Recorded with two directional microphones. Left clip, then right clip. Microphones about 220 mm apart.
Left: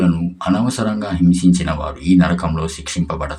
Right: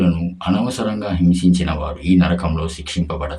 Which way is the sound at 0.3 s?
15° left (ahead or behind).